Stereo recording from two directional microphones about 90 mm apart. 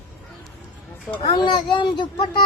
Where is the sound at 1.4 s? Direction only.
60° left (ahead or behind).